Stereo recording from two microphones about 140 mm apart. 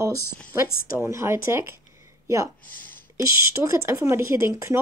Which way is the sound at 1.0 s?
20° right (ahead or behind).